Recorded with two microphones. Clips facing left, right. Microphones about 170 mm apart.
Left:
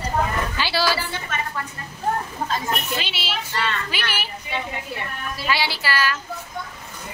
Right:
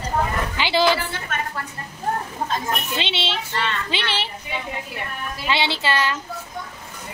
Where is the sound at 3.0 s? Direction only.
25° right (ahead or behind).